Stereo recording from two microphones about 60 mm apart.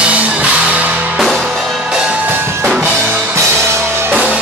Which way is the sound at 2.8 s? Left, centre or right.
Right.